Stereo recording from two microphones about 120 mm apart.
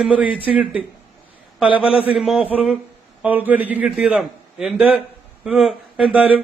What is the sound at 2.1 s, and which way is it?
A man's voice, 5° right (ahead or behind).